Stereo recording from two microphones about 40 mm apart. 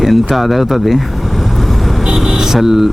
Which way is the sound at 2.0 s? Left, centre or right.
Centre.